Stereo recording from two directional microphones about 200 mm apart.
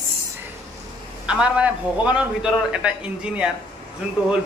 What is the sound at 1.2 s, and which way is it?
A man's voice, 5° right (ahead or behind).